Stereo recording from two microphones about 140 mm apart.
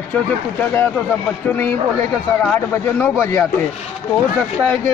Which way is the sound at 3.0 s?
15° left (ahead or behind).